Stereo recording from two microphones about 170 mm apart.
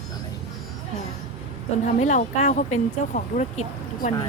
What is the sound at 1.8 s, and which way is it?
Speech, 45° left (ahead or behind).